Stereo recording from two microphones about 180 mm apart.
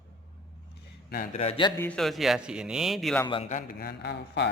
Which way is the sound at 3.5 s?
50° left (ahead or behind).